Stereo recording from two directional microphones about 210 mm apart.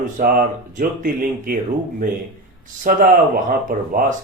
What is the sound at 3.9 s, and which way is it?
Speech, 40° right (ahead or behind).